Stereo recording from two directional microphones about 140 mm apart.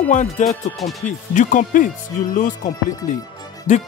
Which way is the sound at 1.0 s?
65° left (ahead or behind).